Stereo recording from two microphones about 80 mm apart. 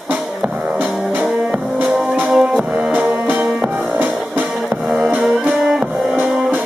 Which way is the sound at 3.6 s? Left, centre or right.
Right.